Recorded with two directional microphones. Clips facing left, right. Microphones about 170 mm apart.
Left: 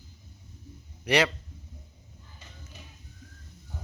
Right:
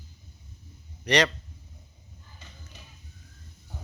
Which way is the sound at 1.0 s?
5° left (ahead or behind).